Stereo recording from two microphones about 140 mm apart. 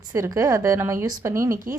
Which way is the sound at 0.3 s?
20° right (ahead or behind).